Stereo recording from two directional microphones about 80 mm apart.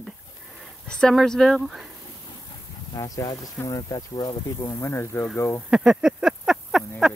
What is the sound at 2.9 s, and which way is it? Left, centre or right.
Speech, left.